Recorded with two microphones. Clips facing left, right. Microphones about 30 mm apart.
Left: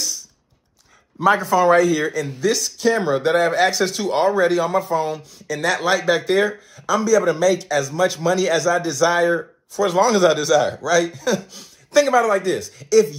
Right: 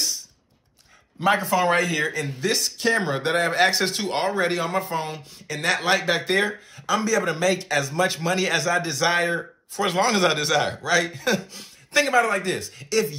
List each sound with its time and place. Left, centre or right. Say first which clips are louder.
1.2 s speech: left 5 dB; right
11.9 s speech: left 4 dB; right